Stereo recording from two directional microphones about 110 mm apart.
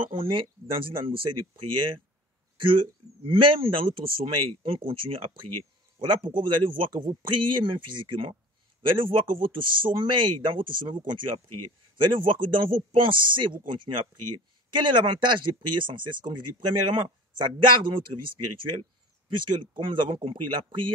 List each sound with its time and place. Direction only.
0.0 s speech: 55° right (ahead or behind)